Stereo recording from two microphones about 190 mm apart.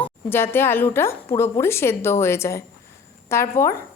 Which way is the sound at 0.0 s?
10° left (ahead or behind).